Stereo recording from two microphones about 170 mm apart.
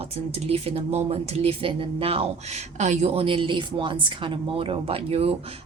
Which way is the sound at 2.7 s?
45° right (ahead or behind).